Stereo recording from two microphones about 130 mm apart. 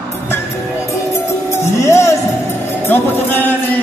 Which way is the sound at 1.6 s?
20° left (ahead or behind).